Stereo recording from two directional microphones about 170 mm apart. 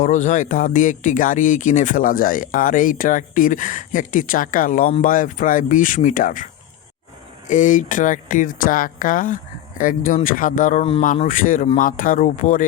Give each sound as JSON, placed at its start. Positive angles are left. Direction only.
{"t": 0.0, "sound": "speech", "side_deg": 45}